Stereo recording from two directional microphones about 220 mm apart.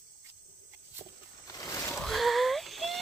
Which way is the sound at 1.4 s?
15° left (ahead or behind).